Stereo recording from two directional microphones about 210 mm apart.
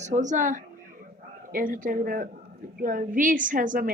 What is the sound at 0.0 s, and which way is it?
A woman's voice, 35° right (ahead or behind).